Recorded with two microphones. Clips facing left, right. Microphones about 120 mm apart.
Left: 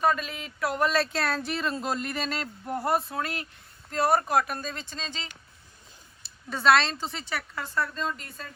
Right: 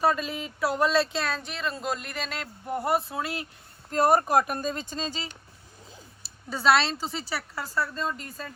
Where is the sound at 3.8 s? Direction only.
45° right (ahead or behind).